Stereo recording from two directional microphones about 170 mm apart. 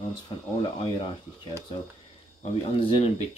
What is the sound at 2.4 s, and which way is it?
Speech, 35° left (ahead or behind).